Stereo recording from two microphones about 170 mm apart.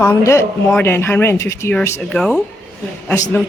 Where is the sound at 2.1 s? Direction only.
5° left (ahead or behind).